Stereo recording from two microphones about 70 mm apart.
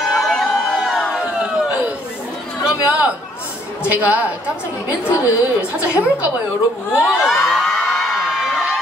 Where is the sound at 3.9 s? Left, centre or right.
Right.